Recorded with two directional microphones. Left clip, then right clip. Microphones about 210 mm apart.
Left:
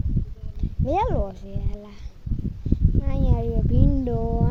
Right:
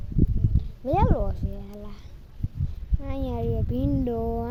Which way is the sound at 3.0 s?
Centre (ahead or behind).